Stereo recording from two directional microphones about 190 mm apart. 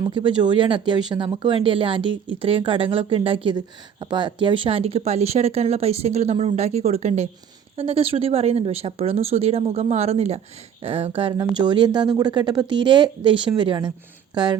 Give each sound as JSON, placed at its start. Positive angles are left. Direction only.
{"t": 0.0, "sound": "speech", "side_deg": -25}